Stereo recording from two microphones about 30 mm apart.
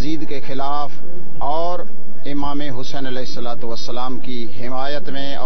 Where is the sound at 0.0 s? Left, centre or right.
Centre.